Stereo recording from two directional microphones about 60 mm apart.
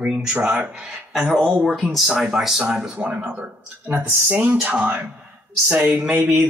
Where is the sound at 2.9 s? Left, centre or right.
Right.